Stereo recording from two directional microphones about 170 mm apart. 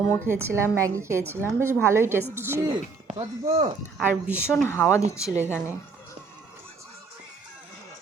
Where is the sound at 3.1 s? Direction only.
25° right (ahead or behind).